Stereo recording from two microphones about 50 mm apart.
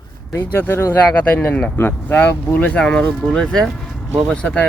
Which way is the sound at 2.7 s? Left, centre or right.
Centre.